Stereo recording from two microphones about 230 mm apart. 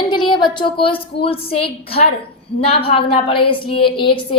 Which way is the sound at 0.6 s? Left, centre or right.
Left.